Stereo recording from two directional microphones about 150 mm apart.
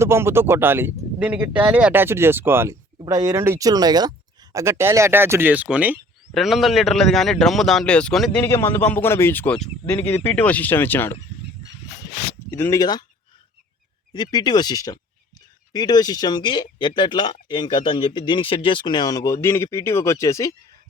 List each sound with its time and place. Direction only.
0.0 s a man's voice: 15° right (ahead or behind); by 8.4 s 5° left (ahead or behind)
8.4 s speech: 15° left (ahead or behind)
12.5 s speech: 15° left (ahead or behind)
14.1 s speech: 30° left (ahead or behind)